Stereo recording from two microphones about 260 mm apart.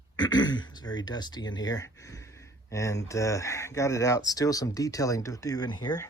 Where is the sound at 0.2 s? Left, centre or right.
Centre.